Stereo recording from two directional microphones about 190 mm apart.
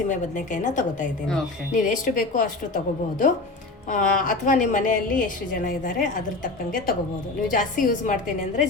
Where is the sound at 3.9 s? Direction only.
45° left (ahead or behind).